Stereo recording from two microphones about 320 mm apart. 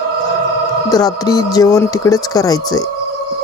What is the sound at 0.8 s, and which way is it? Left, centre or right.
Speech, centre.